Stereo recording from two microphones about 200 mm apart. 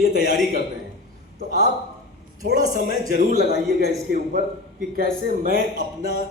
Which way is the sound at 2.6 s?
50° left (ahead or behind).